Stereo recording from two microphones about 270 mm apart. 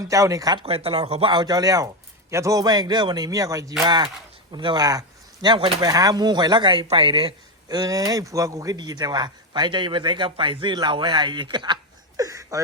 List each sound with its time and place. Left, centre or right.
0.1 s speech: centre